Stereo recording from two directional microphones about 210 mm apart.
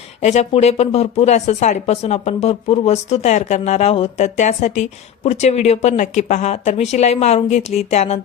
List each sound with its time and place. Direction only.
0.2 s speech: 35° left (ahead or behind)